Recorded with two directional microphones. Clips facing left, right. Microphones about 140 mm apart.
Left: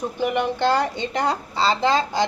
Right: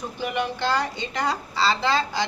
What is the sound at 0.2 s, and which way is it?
Speech, 50° left (ahead or behind).